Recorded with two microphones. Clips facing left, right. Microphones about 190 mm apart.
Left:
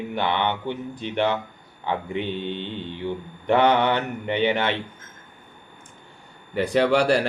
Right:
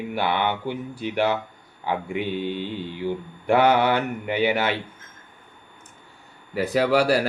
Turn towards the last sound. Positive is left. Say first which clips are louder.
# even
turn(degrees=-5)  # may be behind; listen again after turning